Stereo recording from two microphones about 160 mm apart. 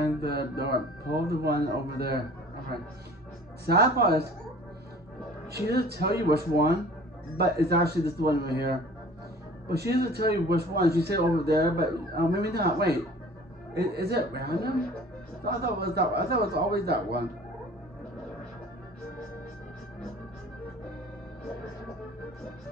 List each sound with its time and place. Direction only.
0.2 s speech: 80° right
3.6 s speech: 90° right
5.7 s a man's voice: 90° right